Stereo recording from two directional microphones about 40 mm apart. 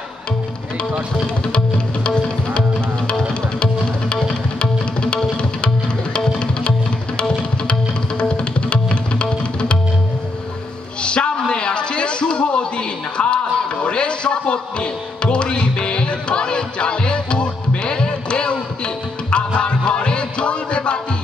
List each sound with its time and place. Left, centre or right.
2.0 s music: left
11.0 s a sound: left
13.8 s music: left